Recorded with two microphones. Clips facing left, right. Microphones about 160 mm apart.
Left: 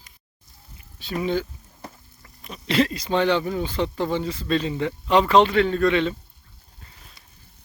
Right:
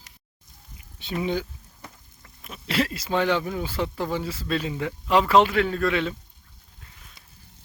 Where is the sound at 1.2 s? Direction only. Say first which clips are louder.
Left 2 dB; 15° right (ahead or behind).